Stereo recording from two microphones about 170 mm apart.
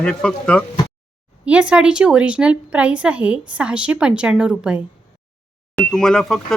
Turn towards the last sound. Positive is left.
turn(degrees=5)  # may be behind; listen again after turning